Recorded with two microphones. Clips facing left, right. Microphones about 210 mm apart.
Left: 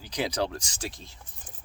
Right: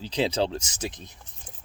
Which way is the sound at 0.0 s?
25° right (ahead or behind).